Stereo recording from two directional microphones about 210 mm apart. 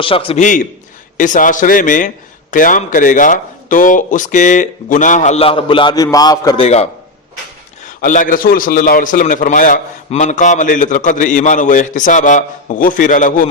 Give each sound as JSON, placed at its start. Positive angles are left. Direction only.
{"t": 0.0, "sound": "a man's voice", "side_deg": 25}
{"t": 7.9, "sound": "a man's voice", "side_deg": 40}